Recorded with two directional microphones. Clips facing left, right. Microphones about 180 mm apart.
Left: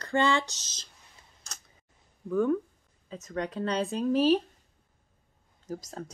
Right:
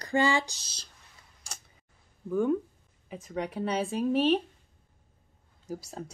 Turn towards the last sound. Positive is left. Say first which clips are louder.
# even
turn(degrees=-10)  # may be behind; listen again after turning